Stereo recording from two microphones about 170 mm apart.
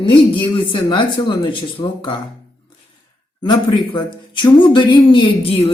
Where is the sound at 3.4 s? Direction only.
25° left (ahead or behind).